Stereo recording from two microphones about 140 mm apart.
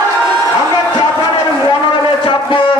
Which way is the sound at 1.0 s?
30° left (ahead or behind).